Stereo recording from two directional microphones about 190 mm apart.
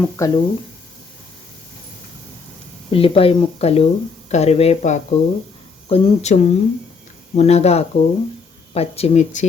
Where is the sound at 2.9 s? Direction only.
30° left (ahead or behind).